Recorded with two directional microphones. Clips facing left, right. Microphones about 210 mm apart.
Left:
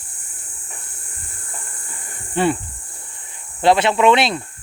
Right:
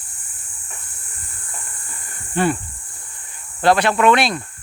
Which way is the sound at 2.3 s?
25° left (ahead or behind).